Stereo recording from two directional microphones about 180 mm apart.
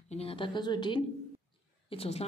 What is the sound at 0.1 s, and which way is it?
A woman's voice, 35° left (ahead or behind).